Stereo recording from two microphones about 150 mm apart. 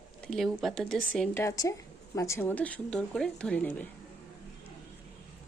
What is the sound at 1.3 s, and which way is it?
A woman's voice, 20° left (ahead or behind).